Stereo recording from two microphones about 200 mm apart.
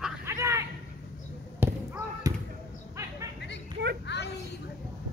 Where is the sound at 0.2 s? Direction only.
15° right (ahead or behind).